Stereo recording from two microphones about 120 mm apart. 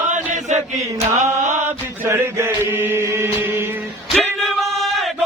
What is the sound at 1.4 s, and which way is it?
Mantra, 90° right.